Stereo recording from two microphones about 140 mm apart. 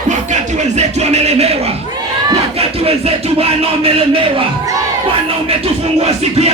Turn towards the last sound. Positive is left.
turn(degrees=-50)  # may be behind; listen again after turning